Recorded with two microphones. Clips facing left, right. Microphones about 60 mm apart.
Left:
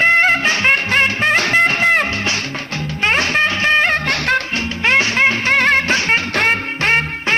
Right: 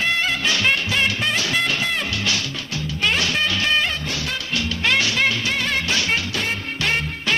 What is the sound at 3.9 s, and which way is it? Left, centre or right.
Music, left.